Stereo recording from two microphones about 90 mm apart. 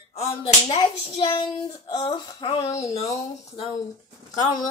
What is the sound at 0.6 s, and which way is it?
A child's voice, 55° left (ahead or behind).